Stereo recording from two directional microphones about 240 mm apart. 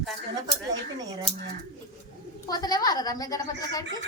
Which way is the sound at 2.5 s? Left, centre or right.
Centre.